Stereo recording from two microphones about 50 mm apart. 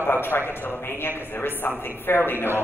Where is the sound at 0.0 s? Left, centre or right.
Left.